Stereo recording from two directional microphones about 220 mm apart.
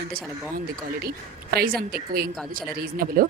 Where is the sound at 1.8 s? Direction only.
45° right (ahead or behind).